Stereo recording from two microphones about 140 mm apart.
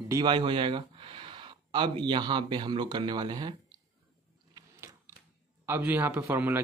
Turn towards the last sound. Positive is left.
turn(degrees=-15)  # may be behind; listen again after turning